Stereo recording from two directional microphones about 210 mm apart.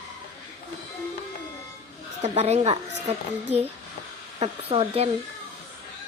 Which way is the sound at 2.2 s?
30° right (ahead or behind).